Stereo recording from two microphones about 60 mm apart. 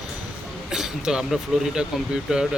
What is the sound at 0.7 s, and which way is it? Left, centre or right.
Speech, centre.